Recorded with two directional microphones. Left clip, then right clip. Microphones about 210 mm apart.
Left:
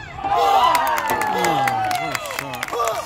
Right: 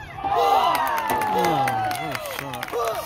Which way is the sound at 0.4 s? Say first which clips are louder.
Left 3 dB; 50° left (ahead or behind).